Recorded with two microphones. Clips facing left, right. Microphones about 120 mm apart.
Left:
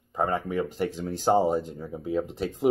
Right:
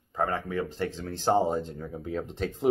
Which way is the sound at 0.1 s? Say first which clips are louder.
Left 2 dB; 15° left (ahead or behind).